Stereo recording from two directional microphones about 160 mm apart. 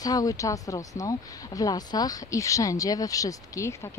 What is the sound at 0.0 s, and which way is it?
Speech, 25° left (ahead or behind).